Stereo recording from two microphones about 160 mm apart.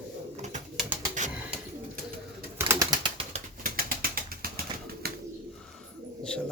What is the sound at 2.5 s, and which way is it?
Bird, 20° right (ahead or behind).